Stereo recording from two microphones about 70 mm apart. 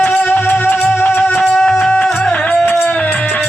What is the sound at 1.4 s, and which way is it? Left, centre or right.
Music, centre.